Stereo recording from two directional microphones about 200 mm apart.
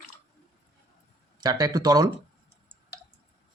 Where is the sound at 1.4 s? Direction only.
20° right (ahead or behind).